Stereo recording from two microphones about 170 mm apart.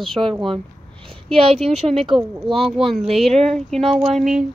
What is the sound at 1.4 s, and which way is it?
Speech, 35° right (ahead or behind).